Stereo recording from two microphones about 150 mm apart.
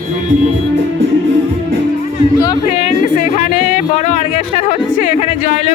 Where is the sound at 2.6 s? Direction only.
55° left (ahead or behind).